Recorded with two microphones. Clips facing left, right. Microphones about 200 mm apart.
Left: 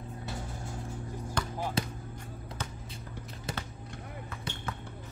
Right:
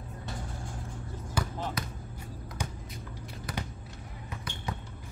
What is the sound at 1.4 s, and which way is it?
Basketball bounce, 5° right (ahead or behind).